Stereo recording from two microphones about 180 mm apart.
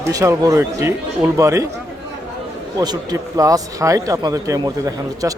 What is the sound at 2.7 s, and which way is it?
Speech, 20° right (ahead or behind).